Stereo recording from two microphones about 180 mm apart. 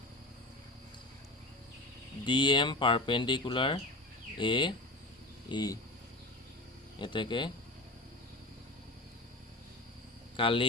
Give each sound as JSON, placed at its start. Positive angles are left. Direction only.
{"t": 2.2, "sound": "speech", "side_deg": 25}
{"t": 7.0, "sound": "speech", "side_deg": 25}
{"t": 10.3, "sound": "speech", "side_deg": 30}